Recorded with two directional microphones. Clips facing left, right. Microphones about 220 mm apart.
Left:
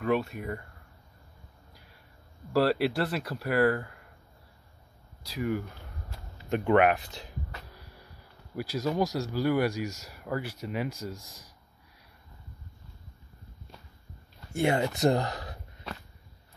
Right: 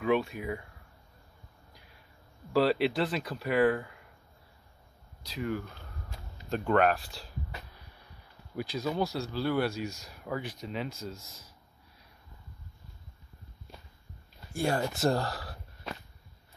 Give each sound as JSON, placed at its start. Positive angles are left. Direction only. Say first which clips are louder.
{"t": 0.0, "sound": "speech", "louder": "even", "side_deg": 0}
{"t": 2.5, "sound": "speech", "louder": "left 1 dB", "side_deg": 0}
{"t": 5.3, "sound": "speech", "louder": "left 3 dB", "side_deg": 10}
{"t": 8.5, "sound": "speech", "louder": "left 3 dB", "side_deg": 10}
{"t": 14.5, "sound": "speech", "louder": "left 3 dB", "side_deg": 20}